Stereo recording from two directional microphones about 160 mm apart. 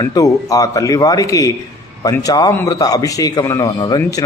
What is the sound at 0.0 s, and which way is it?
Speech, 20° left (ahead or behind).